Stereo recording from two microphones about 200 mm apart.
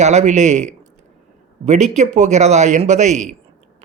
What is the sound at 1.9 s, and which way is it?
Speech, 35° right (ahead or behind).